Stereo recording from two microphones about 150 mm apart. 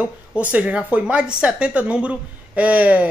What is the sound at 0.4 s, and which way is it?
A woman's voice, 10° right (ahead or behind).